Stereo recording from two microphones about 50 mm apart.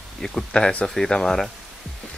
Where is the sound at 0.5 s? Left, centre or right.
Centre.